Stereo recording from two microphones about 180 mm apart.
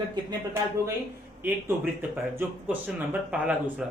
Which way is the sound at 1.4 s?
10° right (ahead or behind).